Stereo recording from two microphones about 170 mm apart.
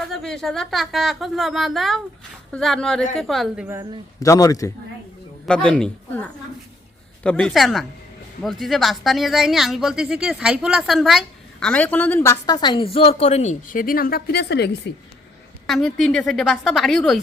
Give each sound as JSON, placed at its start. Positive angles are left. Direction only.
{"t": 0.1, "sound": "speech", "side_deg": 0}
{"t": 4.2, "sound": "a man's voice", "side_deg": 20}
{"t": 5.5, "sound": "speech", "side_deg": 5}
{"t": 7.3, "sound": "speech", "side_deg": 5}
{"t": 15.6, "sound": "speech", "side_deg": 0}